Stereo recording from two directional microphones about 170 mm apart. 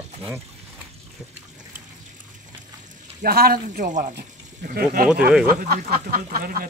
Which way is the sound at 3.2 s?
65° right (ahead or behind).